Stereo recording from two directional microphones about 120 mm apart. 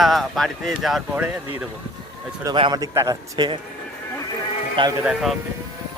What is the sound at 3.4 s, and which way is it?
Speech, 40° right (ahead or behind).